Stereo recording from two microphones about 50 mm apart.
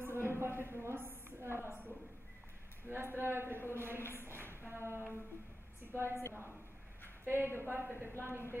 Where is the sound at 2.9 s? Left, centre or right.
Right.